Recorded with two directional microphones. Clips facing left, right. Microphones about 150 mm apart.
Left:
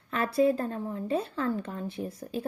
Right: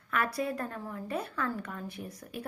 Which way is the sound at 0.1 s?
25° left (ahead or behind).